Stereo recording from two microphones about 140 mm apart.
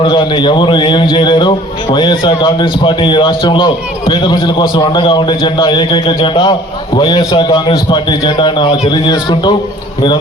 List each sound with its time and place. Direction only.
0.0 s a man's voice: 35° left (ahead or behind)